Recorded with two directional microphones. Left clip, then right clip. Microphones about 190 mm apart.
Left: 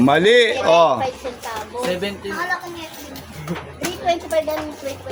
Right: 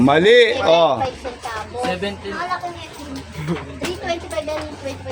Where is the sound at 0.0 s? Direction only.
Centre (ahead or behind).